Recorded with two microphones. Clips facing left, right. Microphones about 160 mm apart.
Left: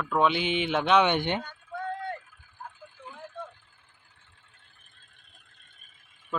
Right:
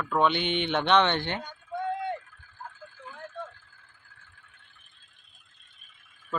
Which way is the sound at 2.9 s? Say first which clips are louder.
Right 1 dB; 20° left (ahead or behind).